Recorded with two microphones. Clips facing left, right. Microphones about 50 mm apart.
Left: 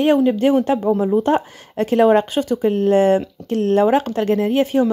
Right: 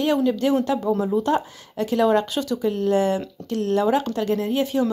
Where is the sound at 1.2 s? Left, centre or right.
Left.